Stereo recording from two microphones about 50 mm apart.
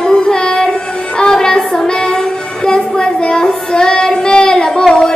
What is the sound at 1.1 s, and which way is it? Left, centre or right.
Music, centre.